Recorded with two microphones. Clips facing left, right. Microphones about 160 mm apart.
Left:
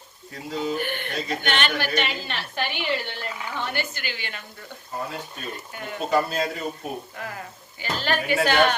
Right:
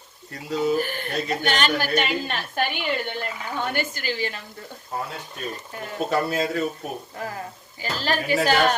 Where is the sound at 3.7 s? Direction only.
45° right (ahead or behind).